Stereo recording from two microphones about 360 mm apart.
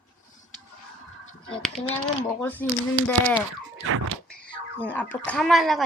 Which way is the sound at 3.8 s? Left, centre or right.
Right.